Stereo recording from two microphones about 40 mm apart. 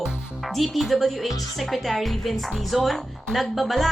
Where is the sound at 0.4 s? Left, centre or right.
Centre.